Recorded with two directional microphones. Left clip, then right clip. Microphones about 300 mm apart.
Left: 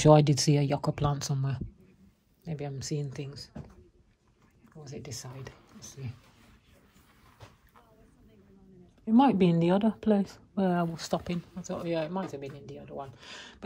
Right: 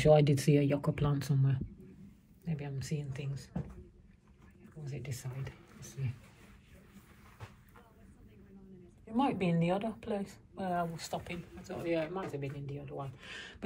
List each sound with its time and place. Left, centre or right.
0.2 s speech: left
4.8 s speech: left
9.1 s a woman's voice: left
11.6 s speech: centre